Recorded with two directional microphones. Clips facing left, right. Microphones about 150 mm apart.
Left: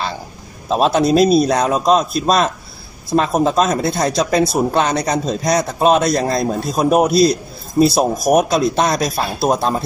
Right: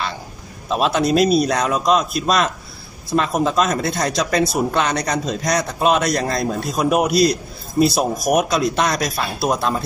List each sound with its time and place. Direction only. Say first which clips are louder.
0.7 s speech: left 4 dB; 35° left (ahead or behind)